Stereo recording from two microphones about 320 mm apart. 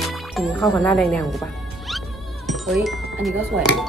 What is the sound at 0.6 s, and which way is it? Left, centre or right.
Speech, centre.